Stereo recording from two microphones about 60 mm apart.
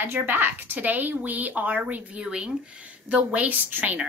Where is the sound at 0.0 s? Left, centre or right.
Right.